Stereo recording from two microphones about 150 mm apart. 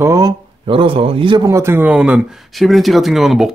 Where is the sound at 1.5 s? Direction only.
20° right (ahead or behind).